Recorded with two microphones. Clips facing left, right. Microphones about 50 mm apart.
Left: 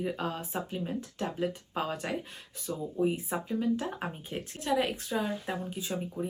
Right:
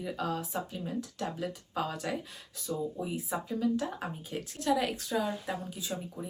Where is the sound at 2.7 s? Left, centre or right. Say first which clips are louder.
Left 4 dB; centre.